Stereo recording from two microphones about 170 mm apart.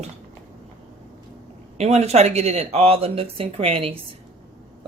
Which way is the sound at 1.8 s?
40° right (ahead or behind).